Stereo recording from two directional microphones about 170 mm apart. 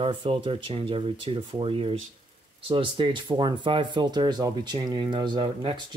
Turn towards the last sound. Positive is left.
turn(degrees=-25)  # may be behind; listen again after turning